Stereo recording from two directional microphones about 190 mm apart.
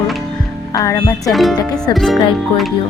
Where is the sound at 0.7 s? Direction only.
15° left (ahead or behind).